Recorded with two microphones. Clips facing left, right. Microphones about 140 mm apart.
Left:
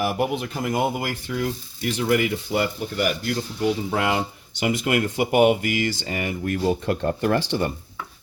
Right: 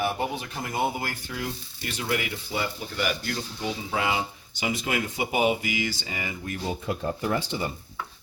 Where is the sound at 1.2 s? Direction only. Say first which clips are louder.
Left 7 dB; 80° left; by 3.1 s 55° left (ahead or behind).